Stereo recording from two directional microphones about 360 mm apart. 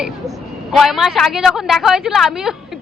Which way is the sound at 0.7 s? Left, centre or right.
Centre.